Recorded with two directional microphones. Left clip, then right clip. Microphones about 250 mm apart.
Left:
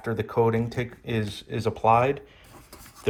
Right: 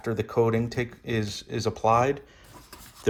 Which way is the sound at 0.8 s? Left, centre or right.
Right.